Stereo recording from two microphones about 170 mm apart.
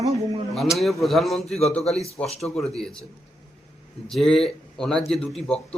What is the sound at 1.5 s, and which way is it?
Speech, 40° left (ahead or behind).